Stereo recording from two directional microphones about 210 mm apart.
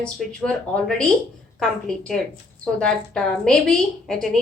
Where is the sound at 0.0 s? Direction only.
5° left (ahead or behind).